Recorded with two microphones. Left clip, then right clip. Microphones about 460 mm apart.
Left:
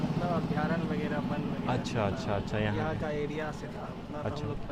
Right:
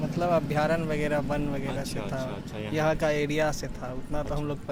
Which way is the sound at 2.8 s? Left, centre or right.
Right.